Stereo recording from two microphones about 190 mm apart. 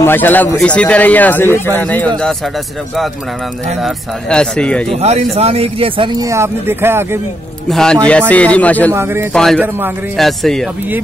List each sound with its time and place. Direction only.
0.0 s speech: 10° left (ahead or behind)
3.8 s speech: 5° left (ahead or behind)
4.9 s speech: 35° right (ahead or behind); by 7.2 s 10° right (ahead or behind)
7.7 s speech: 5° left (ahead or behind)
8.9 s speech: 15° right (ahead or behind)
9.3 s speech: centre (ahead or behind)
9.6 s speech: 10° right (ahead or behind)
10.1 s speech: centre (ahead or behind)